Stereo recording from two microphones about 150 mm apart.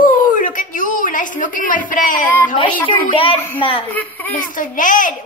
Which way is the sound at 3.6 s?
35° left (ahead or behind).